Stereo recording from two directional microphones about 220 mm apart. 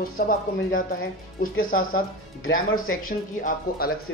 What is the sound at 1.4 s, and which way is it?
Speech, 40° left (ahead or behind).